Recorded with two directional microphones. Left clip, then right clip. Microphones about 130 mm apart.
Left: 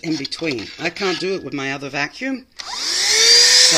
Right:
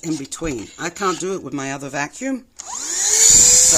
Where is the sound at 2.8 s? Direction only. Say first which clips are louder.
Left 3 dB; 5° right (ahead or behind).